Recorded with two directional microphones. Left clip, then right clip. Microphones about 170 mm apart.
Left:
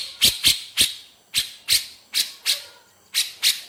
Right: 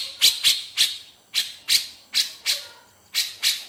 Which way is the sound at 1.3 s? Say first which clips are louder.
Even; 15° left (ahead or behind).